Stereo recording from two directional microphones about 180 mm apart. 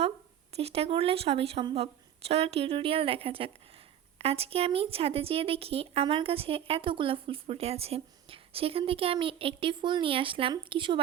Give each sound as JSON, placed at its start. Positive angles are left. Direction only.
{"t": 0.5, "sound": "speech", "side_deg": -35}